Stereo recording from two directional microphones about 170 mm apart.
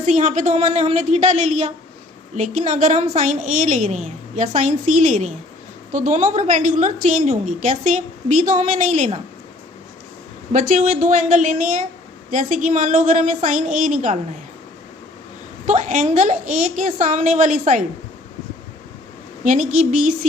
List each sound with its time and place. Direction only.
0.0 s a woman's voice: 50° right (ahead or behind)
10.5 s a woman's voice: 50° right (ahead or behind)
15.6 s a woman's voice: 45° right (ahead or behind)
19.5 s a woman's voice: 50° right (ahead or behind)